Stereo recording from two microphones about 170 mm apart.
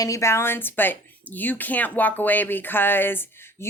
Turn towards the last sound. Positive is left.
turn(degrees=10)  # may be behind; listen again after turning